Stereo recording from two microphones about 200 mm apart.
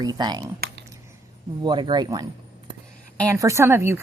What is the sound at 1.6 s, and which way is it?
Speech, 20° right (ahead or behind).